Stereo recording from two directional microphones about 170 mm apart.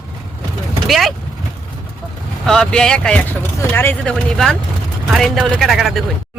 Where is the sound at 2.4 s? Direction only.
5° left (ahead or behind).